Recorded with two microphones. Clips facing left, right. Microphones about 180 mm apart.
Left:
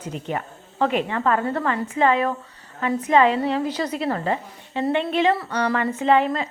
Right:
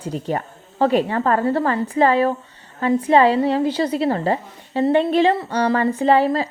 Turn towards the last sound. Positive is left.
turn(degrees=-35)  # may be behind; listen again after turning